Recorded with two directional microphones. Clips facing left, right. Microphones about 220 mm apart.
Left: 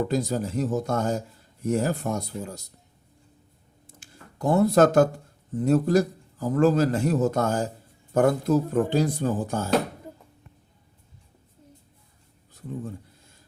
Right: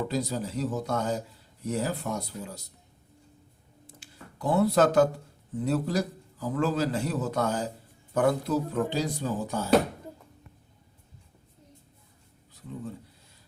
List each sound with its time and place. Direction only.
0.1 s a man's voice: 50° left (ahead or behind)
3.8 s a sound: 45° left (ahead or behind)
5.6 s a man's voice: 45° left (ahead or behind)